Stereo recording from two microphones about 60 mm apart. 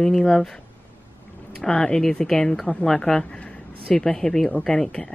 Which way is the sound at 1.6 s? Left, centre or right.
Centre.